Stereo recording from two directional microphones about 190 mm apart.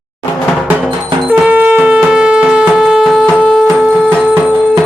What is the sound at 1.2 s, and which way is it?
Music, 10° right (ahead or behind).